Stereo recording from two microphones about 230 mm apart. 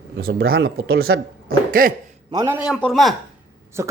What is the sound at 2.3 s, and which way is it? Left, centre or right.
Speech, centre.